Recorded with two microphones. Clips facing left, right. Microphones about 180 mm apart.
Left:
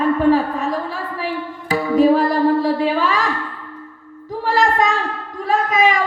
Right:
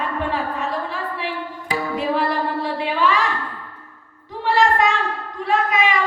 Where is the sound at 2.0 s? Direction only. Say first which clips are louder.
Left 9 dB; 40° left (ahead or behind).